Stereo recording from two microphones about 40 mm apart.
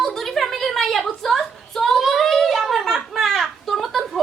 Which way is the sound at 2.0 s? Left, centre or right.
Centre.